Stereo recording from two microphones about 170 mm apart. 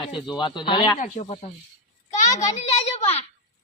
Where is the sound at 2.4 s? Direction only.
40° left (ahead or behind).